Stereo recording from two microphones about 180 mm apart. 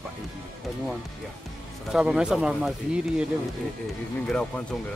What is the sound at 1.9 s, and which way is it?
Speech, centre (ahead or behind).